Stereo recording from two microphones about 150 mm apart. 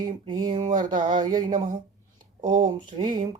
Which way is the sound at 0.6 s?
55° right (ahead or behind).